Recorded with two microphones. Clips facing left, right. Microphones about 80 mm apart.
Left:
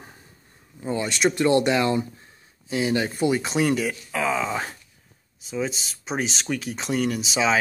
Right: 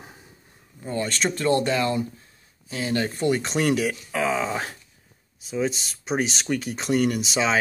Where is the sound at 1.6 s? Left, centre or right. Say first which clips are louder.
Left 2 dB; left.